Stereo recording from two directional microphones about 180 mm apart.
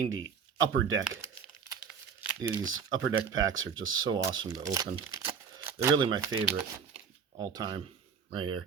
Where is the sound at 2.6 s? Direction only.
90° right.